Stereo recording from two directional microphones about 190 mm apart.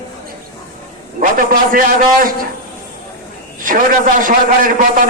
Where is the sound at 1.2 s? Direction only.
45° right (ahead or behind).